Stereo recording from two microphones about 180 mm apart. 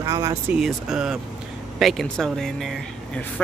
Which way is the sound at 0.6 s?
Centre (ahead or behind).